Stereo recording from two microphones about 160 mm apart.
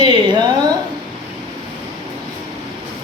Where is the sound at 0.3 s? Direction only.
25° right (ahead or behind).